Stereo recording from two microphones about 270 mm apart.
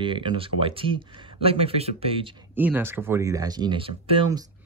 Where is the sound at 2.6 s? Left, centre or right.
Centre.